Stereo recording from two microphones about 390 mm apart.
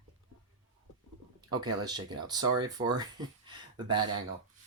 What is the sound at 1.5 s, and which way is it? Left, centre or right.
Speech, centre.